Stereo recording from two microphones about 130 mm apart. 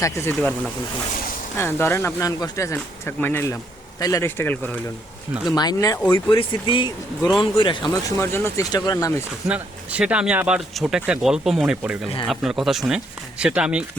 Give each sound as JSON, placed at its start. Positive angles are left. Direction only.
{"t": 0.0, "sound": "speech", "side_deg": 20}
{"t": 1.5, "sound": "speech", "side_deg": 20}
{"t": 2.7, "sound": "speech", "side_deg": 15}
{"t": 5.5, "sound": "speech", "side_deg": 30}
{"t": 7.2, "sound": "speech", "side_deg": 0}
{"t": 7.6, "sound": "speech", "side_deg": 40}
{"t": 8.2, "sound": "speech", "side_deg": 20}
{"t": 9.5, "sound": "speech", "side_deg": -10}